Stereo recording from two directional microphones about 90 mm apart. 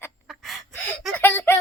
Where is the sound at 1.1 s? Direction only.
25° left (ahead or behind).